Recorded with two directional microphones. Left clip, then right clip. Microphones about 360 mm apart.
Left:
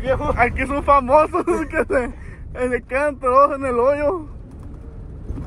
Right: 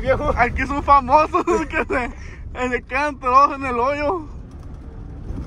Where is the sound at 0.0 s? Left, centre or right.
Right.